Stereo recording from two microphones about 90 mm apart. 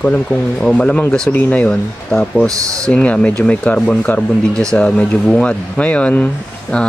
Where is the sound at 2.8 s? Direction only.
15° left (ahead or behind).